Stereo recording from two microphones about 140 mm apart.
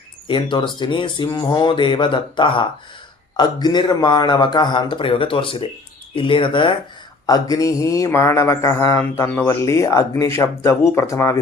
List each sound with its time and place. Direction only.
0.3 s a man's voice: 35° left (ahead or behind)